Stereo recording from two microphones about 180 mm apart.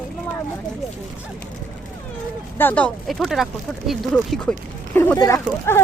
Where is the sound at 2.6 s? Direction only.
10° left (ahead or behind).